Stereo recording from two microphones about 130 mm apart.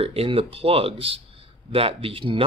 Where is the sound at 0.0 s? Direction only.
45° right (ahead or behind).